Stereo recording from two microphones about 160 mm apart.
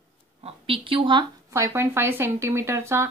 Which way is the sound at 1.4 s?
15° right (ahead or behind).